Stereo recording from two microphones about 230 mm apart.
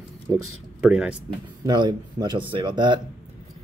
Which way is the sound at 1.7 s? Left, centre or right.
Centre.